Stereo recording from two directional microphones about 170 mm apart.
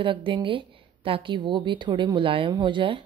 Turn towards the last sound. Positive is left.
turn(degrees=-30)  # may be behind; listen again after turning